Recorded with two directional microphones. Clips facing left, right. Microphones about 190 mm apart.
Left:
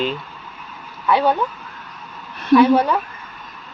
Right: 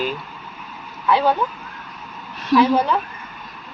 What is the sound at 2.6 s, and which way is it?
Speech, 10° left (ahead or behind).